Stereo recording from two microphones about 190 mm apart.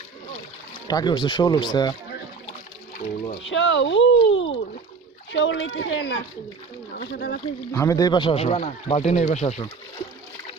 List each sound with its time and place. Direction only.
0.9 s speech: 20° left (ahead or behind)
3.0 s speech: 35° left (ahead or behind)
3.5 s speech: 75° left (ahead or behind)
5.3 s speech: 70° left (ahead or behind)
6.9 s speech: 60° left (ahead or behind)
7.7 s speech: 15° left (ahead or behind); by 9.6 s 35° left (ahead or behind)